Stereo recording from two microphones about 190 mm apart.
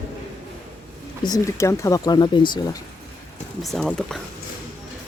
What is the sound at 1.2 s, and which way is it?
Speech, 20° left (ahead or behind).